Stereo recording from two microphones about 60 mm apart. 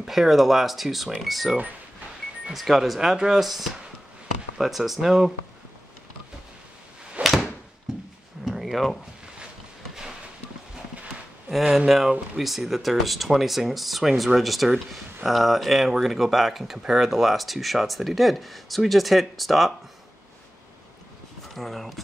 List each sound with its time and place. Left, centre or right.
0.0 s speech: centre
7.2 s door: right
8.5 s a sound: centre
11.9 s speech: centre
21.5 s speech: centre